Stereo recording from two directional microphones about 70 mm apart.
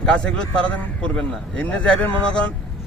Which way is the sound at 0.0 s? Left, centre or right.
Centre.